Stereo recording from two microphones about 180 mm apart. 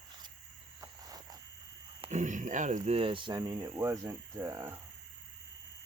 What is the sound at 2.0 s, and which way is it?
Speech, 40° right (ahead or behind).